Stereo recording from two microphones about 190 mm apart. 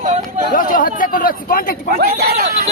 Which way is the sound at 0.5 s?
45° left (ahead or behind).